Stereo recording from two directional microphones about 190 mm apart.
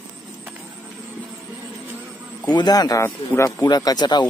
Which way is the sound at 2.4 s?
20° left (ahead or behind).